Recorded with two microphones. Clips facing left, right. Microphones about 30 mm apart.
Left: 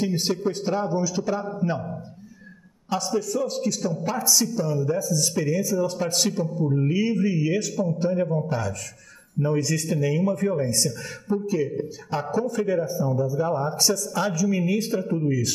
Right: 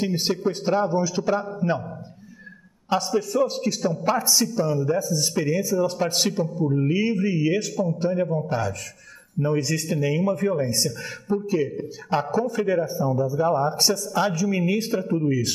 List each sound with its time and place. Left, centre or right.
0.0 s a man's voice: centre
3.2 s a man's voice: right
10.9 s a man's voice: centre
11.4 s a man's voice: centre